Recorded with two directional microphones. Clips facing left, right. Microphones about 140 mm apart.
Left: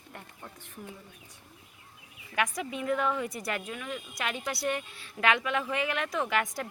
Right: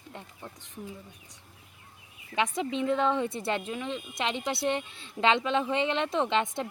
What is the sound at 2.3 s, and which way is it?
Speech, 25° right (ahead or behind).